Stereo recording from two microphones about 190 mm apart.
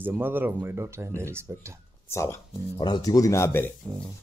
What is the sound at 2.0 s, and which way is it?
Speech, 15° left (ahead or behind).